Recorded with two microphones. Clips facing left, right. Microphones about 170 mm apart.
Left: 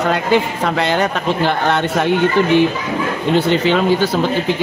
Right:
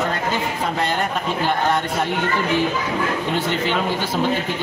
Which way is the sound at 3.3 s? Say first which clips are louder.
Left 10 dB; 85° left.